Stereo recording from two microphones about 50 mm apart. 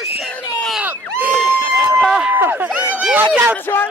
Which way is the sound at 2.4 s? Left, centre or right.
Right.